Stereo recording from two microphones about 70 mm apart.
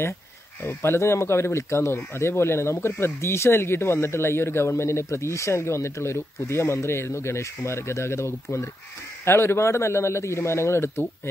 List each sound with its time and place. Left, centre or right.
0.7 s speech: left